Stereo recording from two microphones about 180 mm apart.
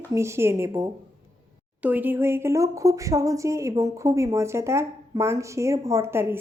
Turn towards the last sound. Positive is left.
turn(degrees=-15)  # may be behind; listen again after turning